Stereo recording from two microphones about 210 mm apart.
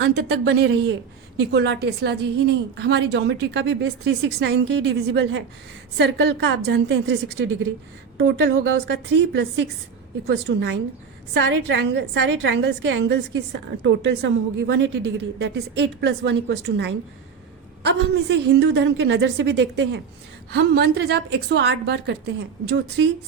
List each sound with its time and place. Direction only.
0.0 s a woman's voice: 55° right (ahead or behind)